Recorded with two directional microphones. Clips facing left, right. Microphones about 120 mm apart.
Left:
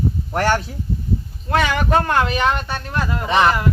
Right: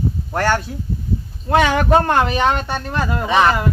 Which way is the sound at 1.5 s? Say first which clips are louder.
Right 4 dB; 10° right (ahead or behind).